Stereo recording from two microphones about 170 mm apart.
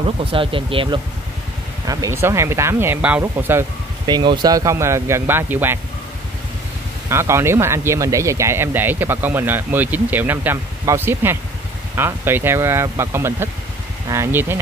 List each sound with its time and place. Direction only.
0.2 s speech: 30° right (ahead or behind)
1.9 s speech: 20° right (ahead or behind)
4.1 s speech: 25° right (ahead or behind)
7.1 s speech: 15° right (ahead or behind)